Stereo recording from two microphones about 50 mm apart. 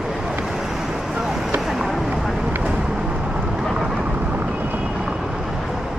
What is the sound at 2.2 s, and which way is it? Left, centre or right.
Vehicle, centre.